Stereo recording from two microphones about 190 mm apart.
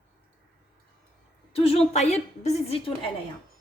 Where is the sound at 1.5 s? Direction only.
30° left (ahead or behind).